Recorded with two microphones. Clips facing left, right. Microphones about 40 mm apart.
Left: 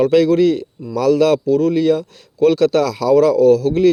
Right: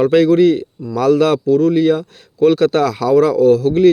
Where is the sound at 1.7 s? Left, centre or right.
Right.